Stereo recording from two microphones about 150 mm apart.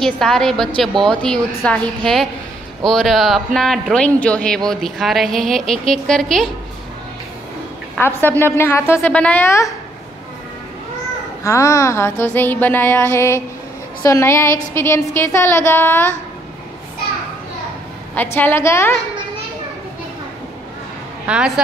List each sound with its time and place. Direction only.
0.0 s a woman's voice: 5° left (ahead or behind)
8.0 s a woman's voice: 15° left (ahead or behind)
11.4 s a woman's voice: 20° left (ahead or behind)
18.1 s a woman's voice: 15° left (ahead or behind)
21.3 s a woman's voice: 5° right (ahead or behind)